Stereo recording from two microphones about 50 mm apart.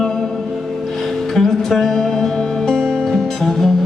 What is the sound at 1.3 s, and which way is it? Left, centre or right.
Music, centre.